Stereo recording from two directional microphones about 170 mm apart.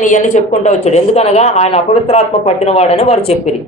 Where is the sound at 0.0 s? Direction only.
45° left (ahead or behind).